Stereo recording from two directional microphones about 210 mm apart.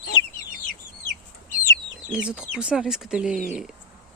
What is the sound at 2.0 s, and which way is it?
Speech, 5° right (ahead or behind).